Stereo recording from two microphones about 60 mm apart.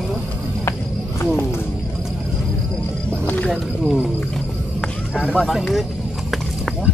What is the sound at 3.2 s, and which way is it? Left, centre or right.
Music, left.